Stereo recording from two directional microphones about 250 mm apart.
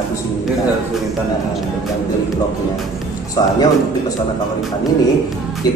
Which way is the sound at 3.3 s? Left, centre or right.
Centre.